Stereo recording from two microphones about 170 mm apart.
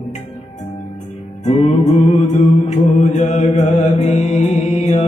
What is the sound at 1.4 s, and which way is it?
Music, 45° left (ahead or behind).